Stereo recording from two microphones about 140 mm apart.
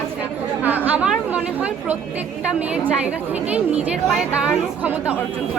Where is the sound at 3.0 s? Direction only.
10° right (ahead or behind).